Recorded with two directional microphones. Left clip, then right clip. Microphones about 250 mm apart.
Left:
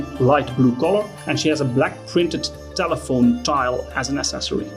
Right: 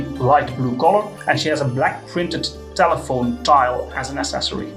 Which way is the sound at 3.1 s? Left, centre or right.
Left.